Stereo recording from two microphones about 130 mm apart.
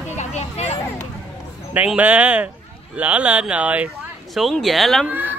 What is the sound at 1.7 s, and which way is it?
Speech, 10° right (ahead or behind).